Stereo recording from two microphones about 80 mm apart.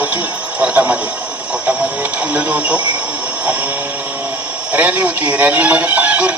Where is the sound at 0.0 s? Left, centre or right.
Right.